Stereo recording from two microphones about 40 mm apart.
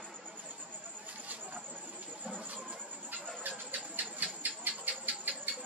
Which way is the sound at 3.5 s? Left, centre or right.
Right.